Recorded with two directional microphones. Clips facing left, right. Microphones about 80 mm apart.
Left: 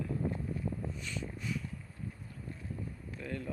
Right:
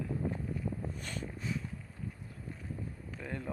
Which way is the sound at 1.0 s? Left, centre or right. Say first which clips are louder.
Even; right.